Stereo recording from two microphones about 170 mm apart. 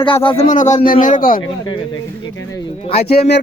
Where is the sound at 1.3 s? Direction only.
30° left (ahead or behind).